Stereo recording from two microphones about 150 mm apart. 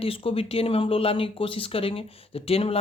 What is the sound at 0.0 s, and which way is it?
Speech, 40° left (ahead or behind).